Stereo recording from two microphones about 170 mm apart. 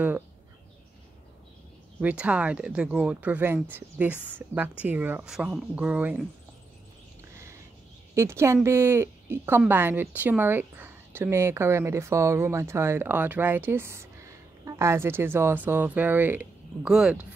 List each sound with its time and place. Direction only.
2.0 s a woman's voice: 10° right (ahead or behind)
8.1 s a woman's voice: 15° right (ahead or behind)